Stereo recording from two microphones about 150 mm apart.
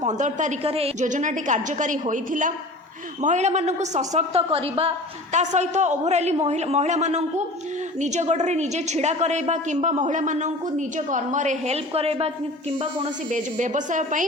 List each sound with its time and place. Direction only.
0.0 s a woman's voice: 55° right (ahead or behind)
5.3 s a woman's voice: 50° right (ahead or behind)
13.3 s a woman's voice: 55° right (ahead or behind)